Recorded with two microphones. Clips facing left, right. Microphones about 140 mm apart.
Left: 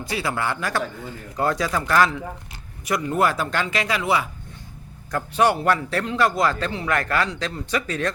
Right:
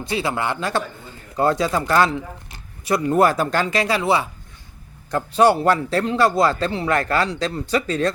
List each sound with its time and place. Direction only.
0.0 s a man's voice: 25° right (ahead or behind)